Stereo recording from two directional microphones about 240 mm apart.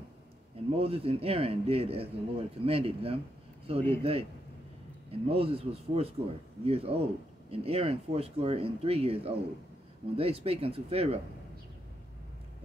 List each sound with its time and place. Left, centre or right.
0.7 s a man's voice: right